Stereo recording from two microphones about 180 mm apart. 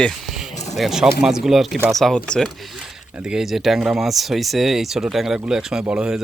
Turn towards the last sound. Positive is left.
turn(degrees=-5)  # may be behind; listen again after turning